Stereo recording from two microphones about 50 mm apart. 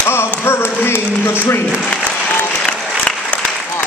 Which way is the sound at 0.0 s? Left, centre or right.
Left.